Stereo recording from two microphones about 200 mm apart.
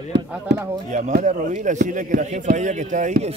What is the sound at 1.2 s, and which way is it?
A man's voice, 35° right (ahead or behind).